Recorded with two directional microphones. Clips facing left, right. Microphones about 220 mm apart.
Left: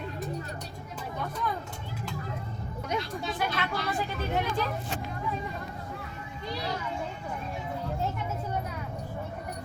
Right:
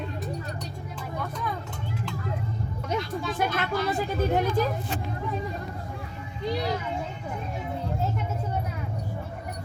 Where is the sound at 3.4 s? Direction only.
45° right (ahead or behind).